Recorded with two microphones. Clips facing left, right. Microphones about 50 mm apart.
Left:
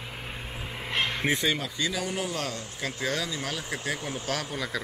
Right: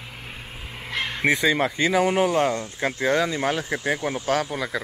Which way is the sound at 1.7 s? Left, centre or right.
Right.